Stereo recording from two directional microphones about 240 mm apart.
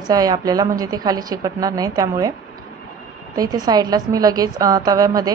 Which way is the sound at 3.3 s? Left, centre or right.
Centre.